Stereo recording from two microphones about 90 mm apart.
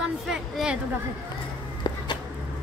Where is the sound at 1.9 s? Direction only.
50° left (ahead or behind).